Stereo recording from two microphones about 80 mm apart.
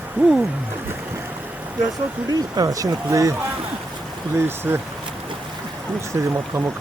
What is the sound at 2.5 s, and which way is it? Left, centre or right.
Speech, right.